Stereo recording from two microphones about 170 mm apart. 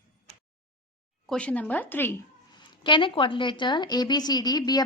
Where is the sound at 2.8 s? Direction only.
30° left (ahead or behind).